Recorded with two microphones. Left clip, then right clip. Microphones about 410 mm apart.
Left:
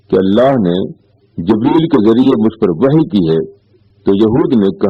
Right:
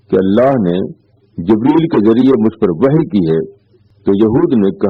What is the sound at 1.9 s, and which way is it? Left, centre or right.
A man's voice, left.